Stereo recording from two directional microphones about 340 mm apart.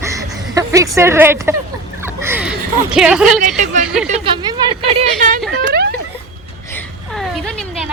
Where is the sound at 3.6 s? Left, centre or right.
Right.